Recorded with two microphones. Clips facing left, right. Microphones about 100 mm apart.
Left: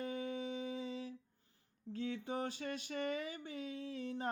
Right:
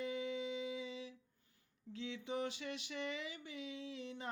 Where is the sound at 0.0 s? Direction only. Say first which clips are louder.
Even; 45° left (ahead or behind).